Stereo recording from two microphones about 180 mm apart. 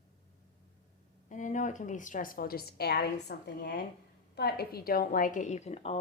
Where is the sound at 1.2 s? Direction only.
45° left (ahead or behind).